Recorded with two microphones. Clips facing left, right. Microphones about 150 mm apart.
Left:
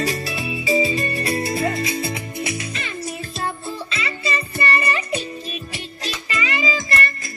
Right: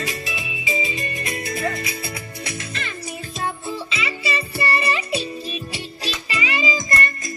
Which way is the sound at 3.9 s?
10° right (ahead or behind).